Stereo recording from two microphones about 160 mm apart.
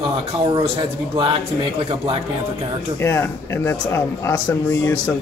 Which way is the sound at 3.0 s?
15° left (ahead or behind).